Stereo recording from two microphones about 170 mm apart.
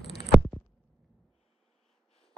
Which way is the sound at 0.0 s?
80° left.